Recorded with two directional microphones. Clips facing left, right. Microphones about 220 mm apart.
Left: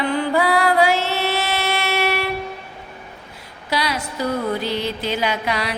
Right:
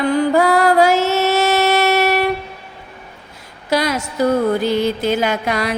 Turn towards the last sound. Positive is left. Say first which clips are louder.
# right 4 dB
turn(degrees=-45)  # may be behind; listen again after turning